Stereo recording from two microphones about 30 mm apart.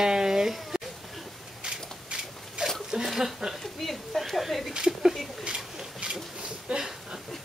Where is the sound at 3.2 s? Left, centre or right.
Centre.